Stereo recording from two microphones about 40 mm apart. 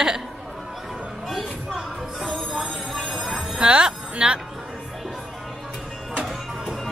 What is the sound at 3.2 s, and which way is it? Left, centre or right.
Music, centre.